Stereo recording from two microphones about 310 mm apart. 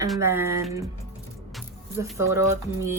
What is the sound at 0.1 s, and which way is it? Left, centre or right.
Speech, centre.